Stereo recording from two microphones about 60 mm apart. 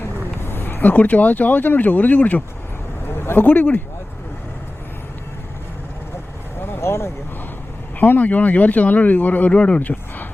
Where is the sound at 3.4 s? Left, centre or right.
Left.